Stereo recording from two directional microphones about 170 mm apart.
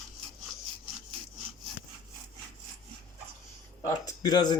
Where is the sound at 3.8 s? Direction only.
20° left (ahead or behind).